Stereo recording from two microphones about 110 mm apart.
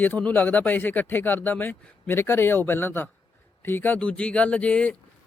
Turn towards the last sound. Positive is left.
turn(degrees=10)  # may be behind; listen again after turning